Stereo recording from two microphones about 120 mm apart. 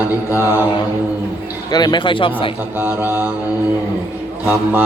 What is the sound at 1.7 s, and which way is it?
Speech, 35° left (ahead or behind).